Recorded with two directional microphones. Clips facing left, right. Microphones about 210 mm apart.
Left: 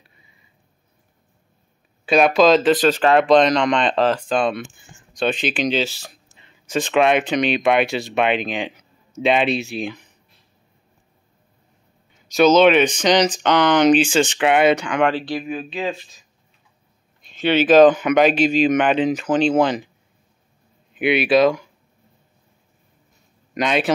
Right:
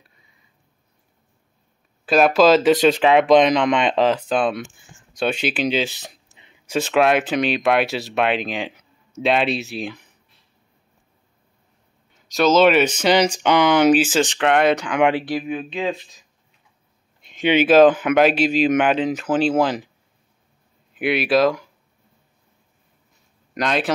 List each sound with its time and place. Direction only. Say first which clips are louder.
2.0 s speech: even; centre (ahead or behind)
12.3 s speech: left 2 dB; centre (ahead or behind)
15.0 s speech: right 1 dB; 20° right (ahead or behind)
15.3 s speech: right 1 dB; centre (ahead or behind)
17.4 s speech: left 1 dB; 15° right (ahead or behind)
20.9 s speech: left 2 dB; centre (ahead or behind)
23.5 s speech: left 2 dB; centre (ahead or behind)